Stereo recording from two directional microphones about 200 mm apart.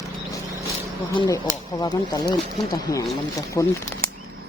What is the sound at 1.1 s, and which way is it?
Speech, 20° left (ahead or behind).